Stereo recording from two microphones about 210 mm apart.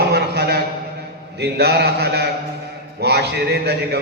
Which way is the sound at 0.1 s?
50° right (ahead or behind).